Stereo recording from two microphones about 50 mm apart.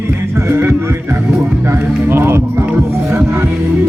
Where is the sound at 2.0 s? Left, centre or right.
Right.